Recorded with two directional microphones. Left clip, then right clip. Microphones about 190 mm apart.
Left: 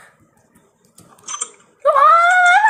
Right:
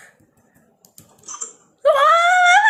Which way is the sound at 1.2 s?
60° left (ahead or behind).